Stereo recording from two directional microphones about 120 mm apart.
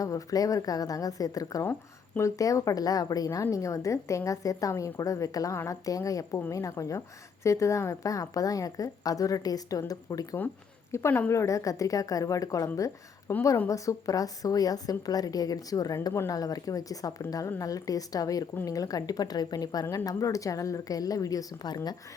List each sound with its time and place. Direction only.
0.0 s a woman's voice: 30° left (ahead or behind)
10.9 s a woman's voice: 20° left (ahead or behind)